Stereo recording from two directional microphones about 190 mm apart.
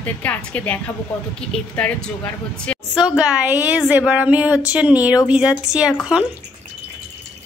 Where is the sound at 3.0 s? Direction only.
5° right (ahead or behind).